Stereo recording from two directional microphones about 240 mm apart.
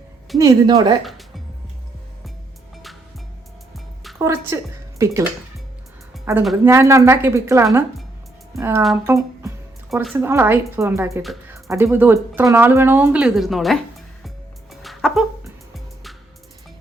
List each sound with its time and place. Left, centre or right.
0.3 s speech: centre
4.2 s a woman's voice: centre
6.3 s speech: centre
9.1 s music: centre
10.2 s speech: centre
14.3 s music: centre